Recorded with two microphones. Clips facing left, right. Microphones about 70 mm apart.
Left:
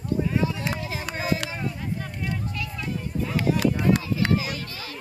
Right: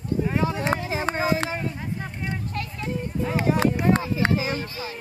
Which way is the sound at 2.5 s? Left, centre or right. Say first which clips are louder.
Right 2 dB; right.